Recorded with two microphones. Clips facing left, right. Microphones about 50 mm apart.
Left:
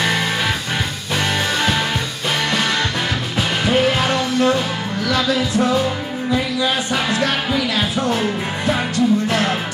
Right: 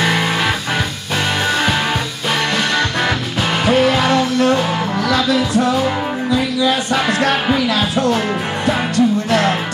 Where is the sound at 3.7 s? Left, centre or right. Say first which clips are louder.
Right 4 dB; right.